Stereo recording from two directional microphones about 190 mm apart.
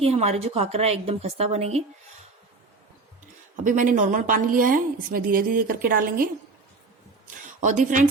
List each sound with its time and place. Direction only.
0.0 s a woman's voice: 35° right (ahead or behind)
3.5 s a woman's voice: 45° right (ahead or behind)
7.6 s a woman's voice: 40° right (ahead or behind)